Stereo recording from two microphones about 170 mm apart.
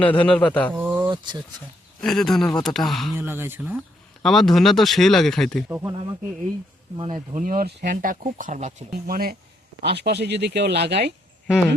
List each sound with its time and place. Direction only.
0.0 s a man's voice: 10° left (ahead or behind)
0.7 s a sound: 10° right (ahead or behind)
1.1 s a sound: 25° right (ahead or behind)
2.0 s speech: 5° left (ahead or behind)
3.2 s speech: 15° right (ahead or behind)
4.2 s speech: centre (ahead or behind)
5.6 s speech: 10° right (ahead or behind)
6.9 s speech: 30° right (ahead or behind)
7.3 s speech: 55° right (ahead or behind)
7.9 s speech: 50° right (ahead or behind)
9.8 s speech: 75° right (ahead or behind)